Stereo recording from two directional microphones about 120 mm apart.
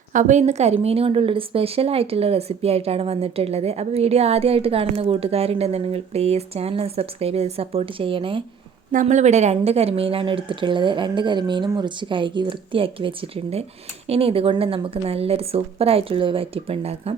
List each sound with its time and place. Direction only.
0.1 s a woman's voice: 90° right; by 8.4 s 45° right (ahead or behind)
8.9 s a woman's voice: 85° right; by 17.2 s 55° right (ahead or behind)